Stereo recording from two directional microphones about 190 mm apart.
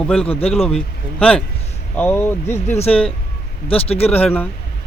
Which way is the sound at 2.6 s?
35° left (ahead or behind).